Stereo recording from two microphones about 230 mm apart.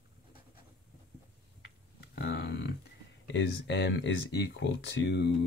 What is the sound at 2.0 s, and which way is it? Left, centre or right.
Speech, left.